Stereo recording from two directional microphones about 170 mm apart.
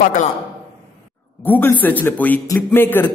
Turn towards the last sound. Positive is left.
turn(degrees=10)  # may be behind; listen again after turning